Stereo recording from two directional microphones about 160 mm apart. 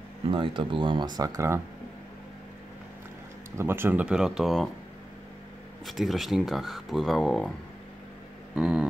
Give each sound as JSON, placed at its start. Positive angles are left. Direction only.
{"t": 0.3, "sound": "speech", "side_deg": -30}
{"t": 3.5, "sound": "speech", "side_deg": -15}
{"t": 5.9, "sound": "speech", "side_deg": 0}
{"t": 8.5, "sound": "speech", "side_deg": -5}